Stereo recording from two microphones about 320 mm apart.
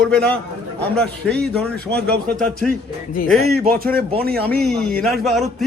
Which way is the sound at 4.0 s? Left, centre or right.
Right.